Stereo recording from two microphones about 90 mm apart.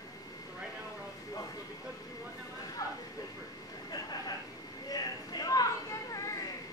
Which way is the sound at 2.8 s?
40° left (ahead or behind).